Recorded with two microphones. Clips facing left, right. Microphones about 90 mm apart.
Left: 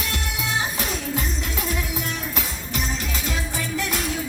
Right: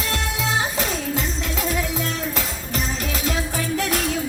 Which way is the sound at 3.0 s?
50° right (ahead or behind).